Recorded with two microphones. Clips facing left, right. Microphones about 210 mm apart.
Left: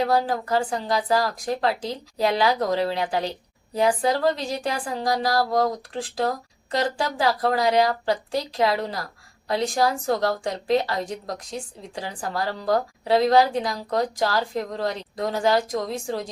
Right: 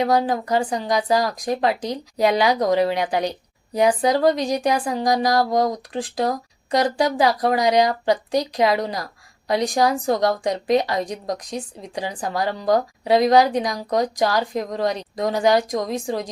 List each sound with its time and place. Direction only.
0.0 s a woman's voice: 15° right (ahead or behind)